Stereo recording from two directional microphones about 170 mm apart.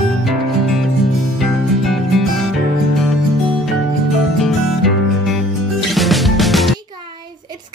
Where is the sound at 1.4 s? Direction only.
Centre (ahead or behind).